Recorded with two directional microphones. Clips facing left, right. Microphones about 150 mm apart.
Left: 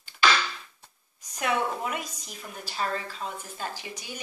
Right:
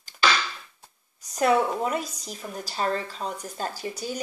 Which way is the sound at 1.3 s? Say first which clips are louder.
Right 6 dB; 35° right (ahead or behind).